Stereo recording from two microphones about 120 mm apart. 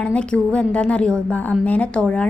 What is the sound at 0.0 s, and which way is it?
A woman's voice, 10° left (ahead or behind).